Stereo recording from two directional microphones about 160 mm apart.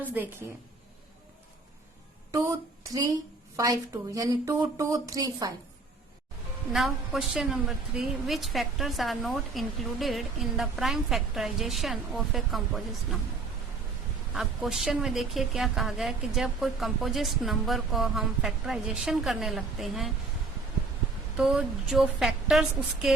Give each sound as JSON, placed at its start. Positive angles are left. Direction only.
{"t": 0.0, "sound": "a woman's voice", "side_deg": -10}
{"t": 3.6, "sound": "a woman's voice", "side_deg": -20}
{"t": 6.7, "sound": "a woman's voice", "side_deg": 0}
{"t": 14.3, "sound": "a woman's voice", "side_deg": 0}
{"t": 21.3, "sound": "a woman's voice", "side_deg": -5}